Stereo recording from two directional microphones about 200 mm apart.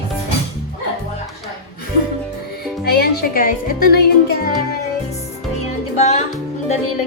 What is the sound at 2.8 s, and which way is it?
A woman's voice, 50° left (ahead or behind).